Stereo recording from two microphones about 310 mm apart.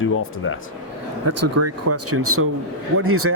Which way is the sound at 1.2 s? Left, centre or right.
Right.